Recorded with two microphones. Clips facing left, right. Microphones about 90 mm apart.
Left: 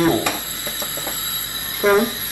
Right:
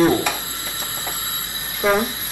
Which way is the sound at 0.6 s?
20° left (ahead or behind).